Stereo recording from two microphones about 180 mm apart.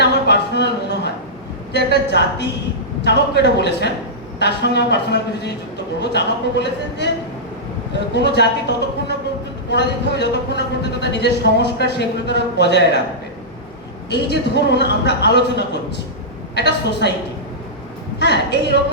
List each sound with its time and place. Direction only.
0.0 s a sound: 70° left (ahead or behind)
1.7 s speech: 70° left (ahead or behind)
8.1 s speech: 70° left (ahead or behind)
14.1 s speech: 70° left (ahead or behind)
18.2 s a woman's voice: 70° left (ahead or behind)